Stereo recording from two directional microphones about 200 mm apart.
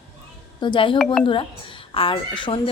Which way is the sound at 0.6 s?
25° left (ahead or behind).